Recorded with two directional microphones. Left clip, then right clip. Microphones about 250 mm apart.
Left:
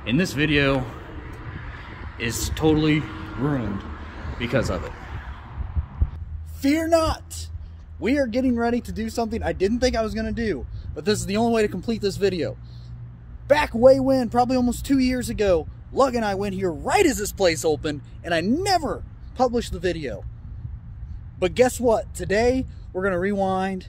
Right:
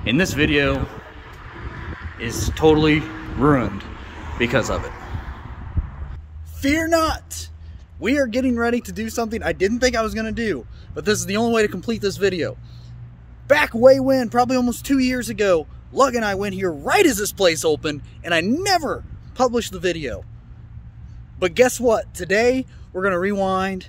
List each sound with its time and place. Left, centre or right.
0.0 s a man's voice: centre
2.1 s a man's voice: centre
4.4 s a man's voice: centre
6.6 s a man's voice: centre
16.9 s speech: centre
17.8 s a man's voice: centre
21.4 s a man's voice: centre